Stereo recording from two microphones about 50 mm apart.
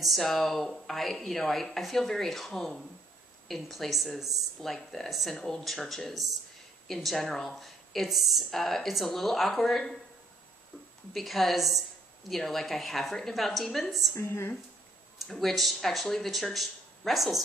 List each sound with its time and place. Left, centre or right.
0.0 s speech: centre
11.1 s speech: centre
14.1 s a woman's voice: left
15.1 s speech: centre